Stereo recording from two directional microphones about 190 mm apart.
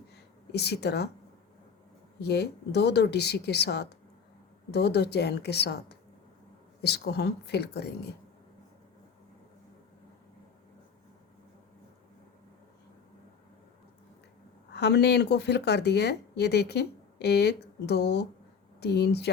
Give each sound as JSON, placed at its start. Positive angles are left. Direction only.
{"t": 0.1, "sound": "a sound", "side_deg": 60}
{"t": 2.2, "sound": "speech", "side_deg": 60}
{"t": 14.7, "sound": "speech", "side_deg": 65}